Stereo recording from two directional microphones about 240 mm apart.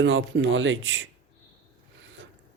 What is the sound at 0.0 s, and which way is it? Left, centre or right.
A man's voice, right.